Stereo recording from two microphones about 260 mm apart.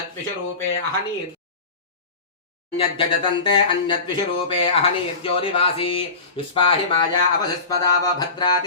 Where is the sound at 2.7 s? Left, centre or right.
Centre.